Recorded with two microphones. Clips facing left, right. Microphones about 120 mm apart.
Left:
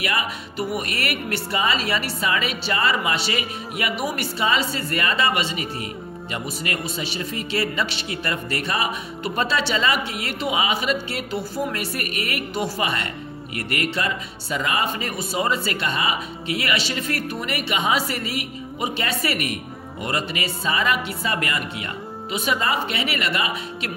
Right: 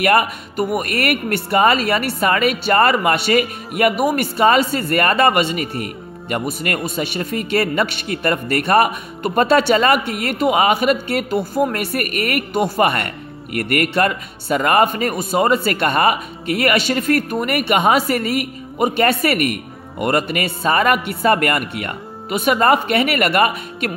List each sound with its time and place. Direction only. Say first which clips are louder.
0.0 s a man's voice: right 10 dB; 55° right (ahead or behind)